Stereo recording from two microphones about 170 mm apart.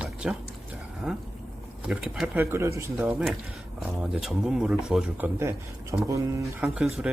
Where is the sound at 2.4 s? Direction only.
15° right (ahead or behind).